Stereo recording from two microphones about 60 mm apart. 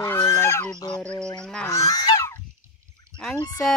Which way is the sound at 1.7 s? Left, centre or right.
Left.